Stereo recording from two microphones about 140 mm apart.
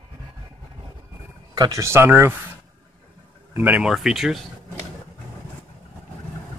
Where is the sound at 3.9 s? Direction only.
Centre (ahead or behind).